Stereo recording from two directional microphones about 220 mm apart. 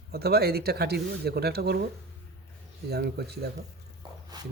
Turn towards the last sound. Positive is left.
turn(degrees=-20)  # may be behind; listen again after turning